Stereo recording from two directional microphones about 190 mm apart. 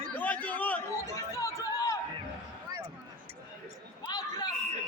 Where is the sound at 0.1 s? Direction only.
10° left (ahead or behind).